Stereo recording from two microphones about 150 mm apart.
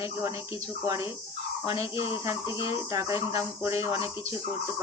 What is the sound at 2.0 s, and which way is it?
Speech, 40° left (ahead or behind).